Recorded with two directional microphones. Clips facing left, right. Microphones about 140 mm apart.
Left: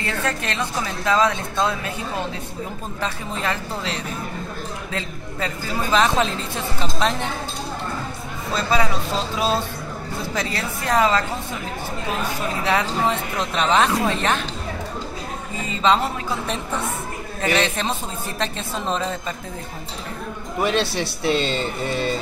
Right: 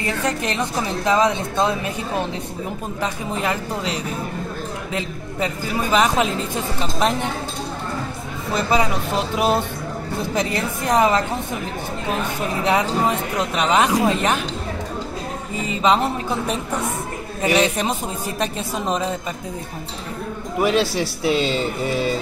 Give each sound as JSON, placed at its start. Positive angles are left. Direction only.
{"t": 0.0, "sound": "speech", "side_deg": -15}
{"t": 8.5, "sound": "speech", "side_deg": -15}
{"t": 12.6, "sound": "speech", "side_deg": -15}
{"t": 15.7, "sound": "speech", "side_deg": -15}
{"t": 20.5, "sound": "a man's voice", "side_deg": -5}